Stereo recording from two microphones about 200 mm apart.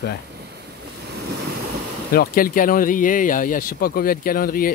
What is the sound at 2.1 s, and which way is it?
Speech, 45° left (ahead or behind).